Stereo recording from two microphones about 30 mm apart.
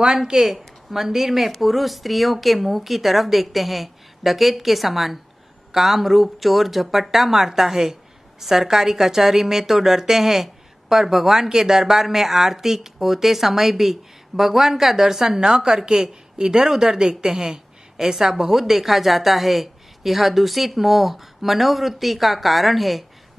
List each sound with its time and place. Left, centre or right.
0.0 s a woman's voice: right; by 23.0 s centre